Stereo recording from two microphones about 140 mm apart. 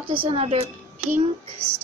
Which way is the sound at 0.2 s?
45° right (ahead or behind).